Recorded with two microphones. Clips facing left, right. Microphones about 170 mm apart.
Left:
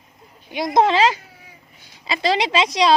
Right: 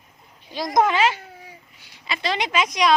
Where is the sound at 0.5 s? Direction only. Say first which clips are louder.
Left 3 dB; 25° left (ahead or behind).